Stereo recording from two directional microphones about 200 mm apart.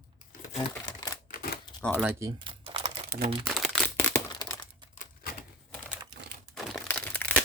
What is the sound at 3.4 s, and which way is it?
Crumpling, centre (ahead or behind).